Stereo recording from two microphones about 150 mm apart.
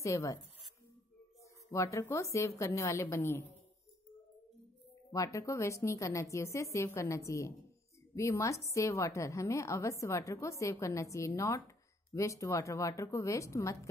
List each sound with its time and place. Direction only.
0.0 s a woman's voice: 20° left (ahead or behind)
1.7 s a woman's voice: 20° left (ahead or behind)
5.1 s a woman's voice: 20° left (ahead or behind)